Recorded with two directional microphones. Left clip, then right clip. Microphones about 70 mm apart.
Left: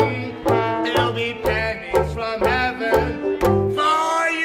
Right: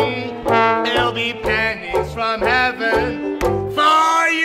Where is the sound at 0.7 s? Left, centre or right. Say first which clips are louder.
Right 3 dB; left.